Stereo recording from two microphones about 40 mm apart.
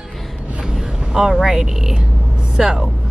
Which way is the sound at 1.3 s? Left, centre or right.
Centre.